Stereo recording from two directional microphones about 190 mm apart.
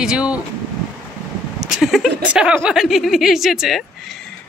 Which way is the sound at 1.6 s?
Centre (ahead or behind).